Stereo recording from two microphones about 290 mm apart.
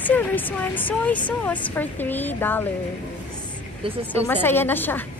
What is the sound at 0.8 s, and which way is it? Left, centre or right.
A woman's voice, centre.